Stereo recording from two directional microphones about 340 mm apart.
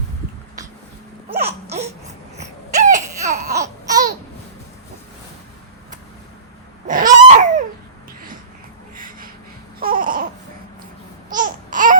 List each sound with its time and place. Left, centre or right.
1.3 s baby cry: right
3.5 s babbling: centre
6.8 s a sound: right
9.0 s gasp: right
9.8 s babbling: right
11.3 s babbling: right